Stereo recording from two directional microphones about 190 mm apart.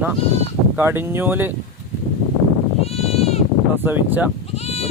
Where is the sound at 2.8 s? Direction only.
30° left (ahead or behind).